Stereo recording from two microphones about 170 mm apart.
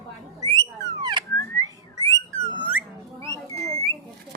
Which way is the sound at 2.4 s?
25° left (ahead or behind).